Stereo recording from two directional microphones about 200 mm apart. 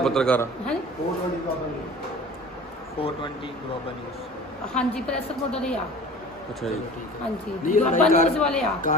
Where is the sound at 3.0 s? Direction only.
30° left (ahead or behind).